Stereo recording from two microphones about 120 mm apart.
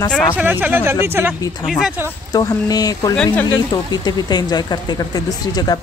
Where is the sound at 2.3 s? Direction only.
30° left (ahead or behind).